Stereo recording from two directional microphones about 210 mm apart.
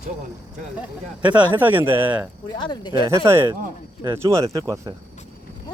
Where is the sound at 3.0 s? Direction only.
15° right (ahead or behind).